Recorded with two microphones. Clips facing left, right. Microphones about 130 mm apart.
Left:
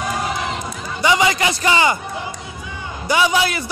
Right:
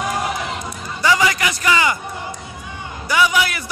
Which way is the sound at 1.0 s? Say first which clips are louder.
Left 1 dB; 20° left (ahead or behind).